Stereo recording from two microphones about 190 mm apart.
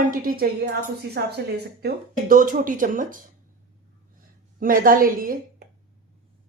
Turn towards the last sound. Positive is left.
turn(degrees=-50)  # may be behind; listen again after turning